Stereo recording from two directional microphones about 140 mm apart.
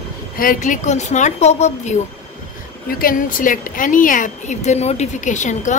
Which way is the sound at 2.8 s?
90° left.